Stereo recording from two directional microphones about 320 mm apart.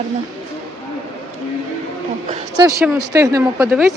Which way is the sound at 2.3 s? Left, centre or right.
Centre.